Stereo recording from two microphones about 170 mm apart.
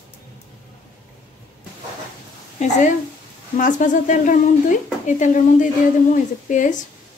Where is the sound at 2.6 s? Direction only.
45° left (ahead or behind).